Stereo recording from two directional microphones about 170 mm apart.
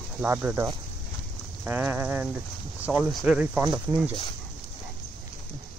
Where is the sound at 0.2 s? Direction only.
10° right (ahead or behind).